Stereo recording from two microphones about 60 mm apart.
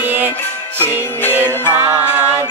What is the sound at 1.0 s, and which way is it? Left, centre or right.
Music, left.